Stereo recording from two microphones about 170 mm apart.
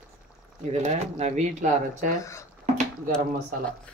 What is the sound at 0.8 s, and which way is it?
Speech, 45° right (ahead or behind).